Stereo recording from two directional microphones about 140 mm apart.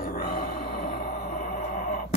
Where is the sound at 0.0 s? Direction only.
90° left.